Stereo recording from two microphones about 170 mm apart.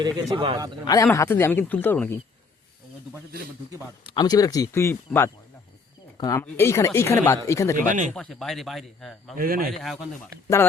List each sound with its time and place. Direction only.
0.0 s a man's voice: 30° right (ahead or behind)
1.0 s speech: 15° left (ahead or behind)
4.0 s speech: 25° left (ahead or behind)
7.8 s speech: 50° right (ahead or behind)
8.1 s speech: 5° left (ahead or behind)
9.4 s speech: 60° right (ahead or behind)
9.8 s speech: centre (ahead or behind)